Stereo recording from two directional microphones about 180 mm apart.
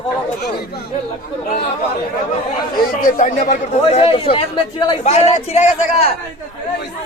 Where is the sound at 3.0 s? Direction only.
45° left (ahead or behind).